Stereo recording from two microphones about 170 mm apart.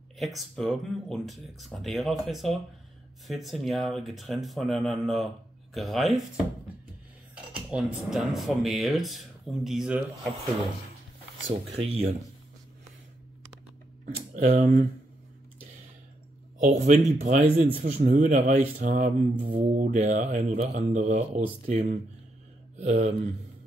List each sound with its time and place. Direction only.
0.6 s speech: centre (ahead or behind)
7.7 s speech: centre (ahead or behind)
11.5 s speech: 35° right (ahead or behind)
14.3 s a man's voice: 45° right (ahead or behind)
16.6 s a man's voice: 45° right (ahead or behind)
19.8 s a man's voice: 45° right (ahead or behind)